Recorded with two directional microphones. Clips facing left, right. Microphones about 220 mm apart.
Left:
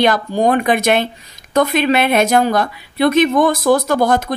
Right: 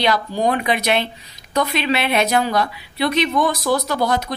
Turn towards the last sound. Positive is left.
turn(degrees=50)  # may be behind; listen again after turning